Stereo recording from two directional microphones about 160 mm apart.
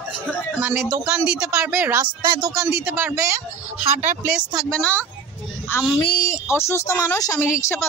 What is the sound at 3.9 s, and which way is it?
Speech, 45° right (ahead or behind).